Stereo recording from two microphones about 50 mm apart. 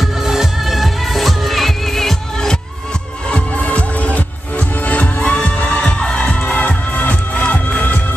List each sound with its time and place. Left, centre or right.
0.0 s music: centre
3.3 s music: left